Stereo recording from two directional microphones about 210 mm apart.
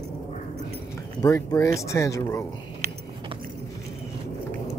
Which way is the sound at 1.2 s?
15° left (ahead or behind).